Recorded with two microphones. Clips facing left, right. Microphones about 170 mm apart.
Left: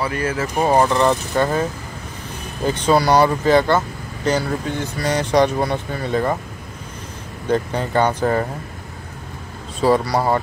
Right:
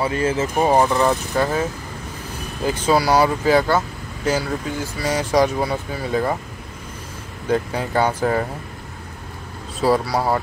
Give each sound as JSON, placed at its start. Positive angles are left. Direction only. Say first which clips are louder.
{"t": 0.0, "sound": "speech", "louder": "right 2 dB", "side_deg": -25}
{"t": 0.6, "sound": "speech", "louder": "left 1 dB", "side_deg": -10}
{"t": 7.4, "sound": "speech", "louder": "left 1 dB", "side_deg": -5}
{"t": 9.8, "sound": "speech", "louder": "left 2 dB", "side_deg": -5}